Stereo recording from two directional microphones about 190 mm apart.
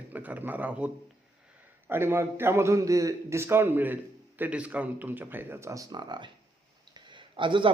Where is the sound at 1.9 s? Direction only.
15° right (ahead or behind).